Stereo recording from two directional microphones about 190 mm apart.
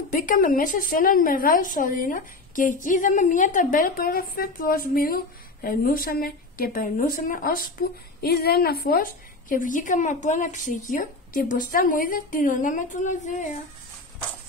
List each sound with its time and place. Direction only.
0.1 s a woman's voice: 45° left (ahead or behind)